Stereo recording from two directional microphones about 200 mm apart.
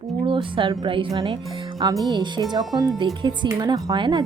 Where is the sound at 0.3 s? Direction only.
25° right (ahead or behind).